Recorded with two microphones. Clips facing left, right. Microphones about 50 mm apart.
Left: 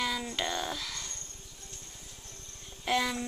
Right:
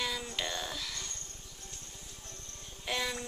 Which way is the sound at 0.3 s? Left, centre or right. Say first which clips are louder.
Left 4 dB; left.